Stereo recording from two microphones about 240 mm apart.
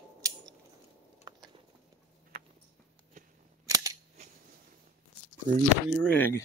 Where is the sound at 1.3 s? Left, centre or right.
Centre.